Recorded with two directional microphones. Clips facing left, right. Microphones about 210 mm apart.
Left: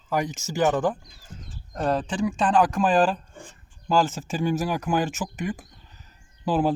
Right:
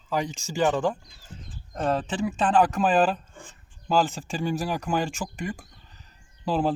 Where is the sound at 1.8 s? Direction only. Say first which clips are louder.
Left 1 dB; centre (ahead or behind).